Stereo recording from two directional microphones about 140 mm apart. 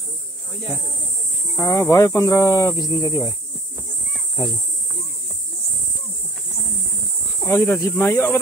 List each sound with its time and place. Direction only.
1.6 s speech: 25° left (ahead or behind)
7.4 s speech: 20° left (ahead or behind)